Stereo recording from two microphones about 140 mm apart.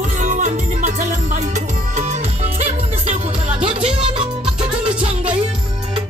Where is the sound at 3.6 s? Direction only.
40° right (ahead or behind).